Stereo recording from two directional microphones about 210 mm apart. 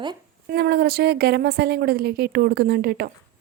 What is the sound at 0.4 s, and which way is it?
A woman's voice, 50° right (ahead or behind).